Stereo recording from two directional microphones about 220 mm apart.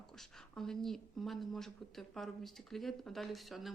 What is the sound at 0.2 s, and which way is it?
A woman's voice, centre (ahead or behind).